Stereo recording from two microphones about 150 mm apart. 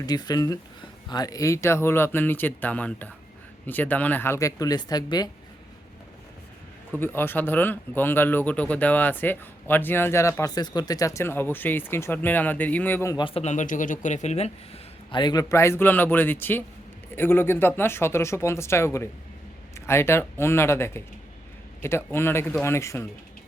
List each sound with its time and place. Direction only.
0.0 s speech: 25° left (ahead or behind)
7.0 s speech: 15° left (ahead or behind)
13.1 s a man's voice: 35° left (ahead or behind)
15.1 s speech: 30° left (ahead or behind)